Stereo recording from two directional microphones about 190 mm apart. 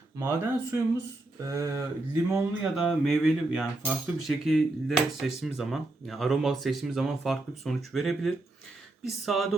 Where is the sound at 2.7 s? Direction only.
Centre (ahead or behind).